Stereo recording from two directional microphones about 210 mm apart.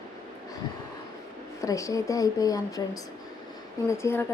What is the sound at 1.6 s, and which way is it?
A woman's voice, 15° left (ahead or behind).